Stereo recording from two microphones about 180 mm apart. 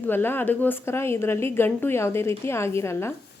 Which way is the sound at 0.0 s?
10° left (ahead or behind).